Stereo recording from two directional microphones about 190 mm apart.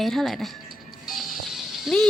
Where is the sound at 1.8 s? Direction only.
Centre (ahead or behind).